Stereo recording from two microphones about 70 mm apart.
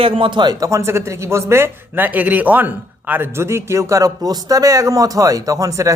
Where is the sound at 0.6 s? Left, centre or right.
Right.